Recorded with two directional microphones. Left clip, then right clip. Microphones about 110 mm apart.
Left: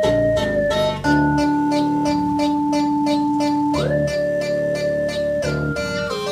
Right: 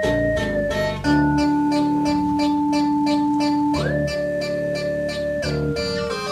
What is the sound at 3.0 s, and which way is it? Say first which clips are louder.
Music: left 1 dB; 15° right (ahead or behind).